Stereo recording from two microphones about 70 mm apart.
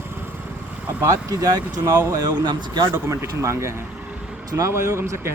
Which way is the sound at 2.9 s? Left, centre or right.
Right.